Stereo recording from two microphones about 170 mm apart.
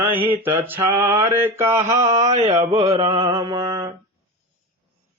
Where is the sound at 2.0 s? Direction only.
40° right (ahead or behind).